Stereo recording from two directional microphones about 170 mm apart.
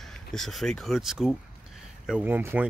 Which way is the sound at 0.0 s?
Centre (ahead or behind).